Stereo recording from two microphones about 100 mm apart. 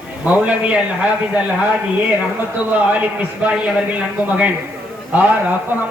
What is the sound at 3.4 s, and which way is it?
A man's voice, 10° right (ahead or behind).